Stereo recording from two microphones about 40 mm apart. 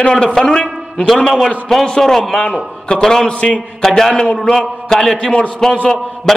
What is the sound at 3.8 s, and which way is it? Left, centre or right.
A man's voice, centre.